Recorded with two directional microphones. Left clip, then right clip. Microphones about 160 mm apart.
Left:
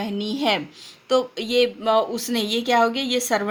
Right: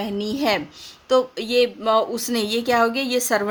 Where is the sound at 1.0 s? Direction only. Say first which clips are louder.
Right 2 dB; 40° right (ahead or behind).